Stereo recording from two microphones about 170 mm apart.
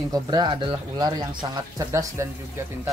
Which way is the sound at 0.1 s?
25° right (ahead or behind).